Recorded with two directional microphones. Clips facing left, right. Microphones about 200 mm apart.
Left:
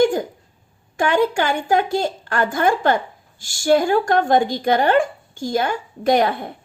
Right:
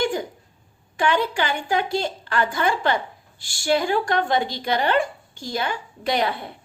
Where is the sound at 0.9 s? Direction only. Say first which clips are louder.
Left 4 dB; 45° left (ahead or behind).